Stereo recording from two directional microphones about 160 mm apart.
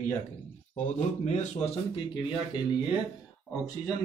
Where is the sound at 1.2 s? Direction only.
45° left (ahead or behind).